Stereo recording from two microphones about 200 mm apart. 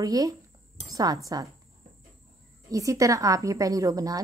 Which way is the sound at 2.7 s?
15° right (ahead or behind).